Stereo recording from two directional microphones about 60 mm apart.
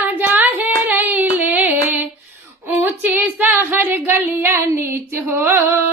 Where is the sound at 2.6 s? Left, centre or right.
Right.